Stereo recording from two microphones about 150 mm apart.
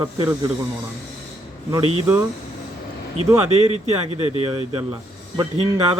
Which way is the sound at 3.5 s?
45° right (ahead or behind).